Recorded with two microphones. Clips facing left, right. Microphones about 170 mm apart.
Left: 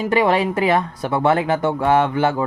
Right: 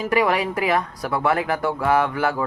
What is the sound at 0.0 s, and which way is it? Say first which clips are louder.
Speech: left 3 dB; 25° left (ahead or behind).